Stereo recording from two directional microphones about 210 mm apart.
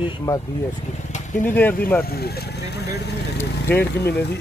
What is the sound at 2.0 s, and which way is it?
Speech, 50° left (ahead or behind).